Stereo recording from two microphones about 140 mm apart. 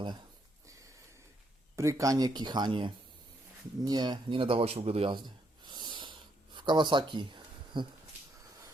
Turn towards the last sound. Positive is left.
turn(degrees=-35)  # may be behind; listen again after turning